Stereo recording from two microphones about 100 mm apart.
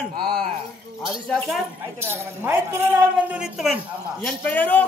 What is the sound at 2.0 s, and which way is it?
Speech, 25° right (ahead or behind).